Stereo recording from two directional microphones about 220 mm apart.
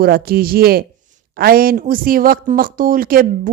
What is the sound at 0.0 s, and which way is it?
Speech, 45° right (ahead or behind).